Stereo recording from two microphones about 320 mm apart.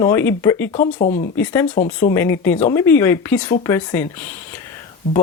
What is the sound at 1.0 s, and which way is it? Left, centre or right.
Speech, left.